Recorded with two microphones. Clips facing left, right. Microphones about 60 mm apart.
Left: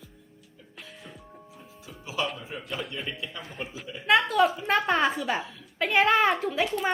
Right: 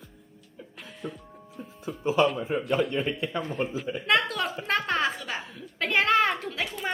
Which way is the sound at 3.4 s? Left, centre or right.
Centre.